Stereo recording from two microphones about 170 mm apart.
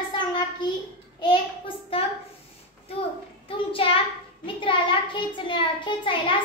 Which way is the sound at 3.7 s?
30° left (ahead or behind).